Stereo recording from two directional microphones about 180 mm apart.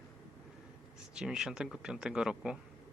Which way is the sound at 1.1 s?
5° right (ahead or behind).